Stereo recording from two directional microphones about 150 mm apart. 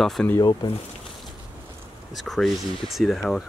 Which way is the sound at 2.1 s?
Centre (ahead or behind).